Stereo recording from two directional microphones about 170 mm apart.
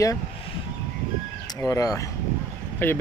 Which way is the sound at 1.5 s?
20° left (ahead or behind).